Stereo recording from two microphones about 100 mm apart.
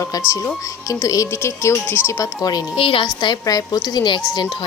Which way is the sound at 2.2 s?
40° left (ahead or behind).